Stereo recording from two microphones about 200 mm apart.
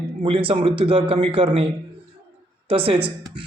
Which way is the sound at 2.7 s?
25° right (ahead or behind).